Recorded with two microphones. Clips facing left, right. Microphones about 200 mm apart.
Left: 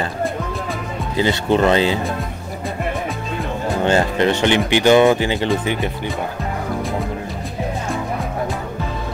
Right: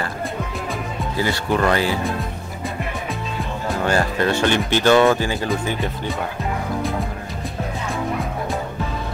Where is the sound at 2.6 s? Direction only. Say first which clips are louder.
Left 4 dB; centre (ahead or behind).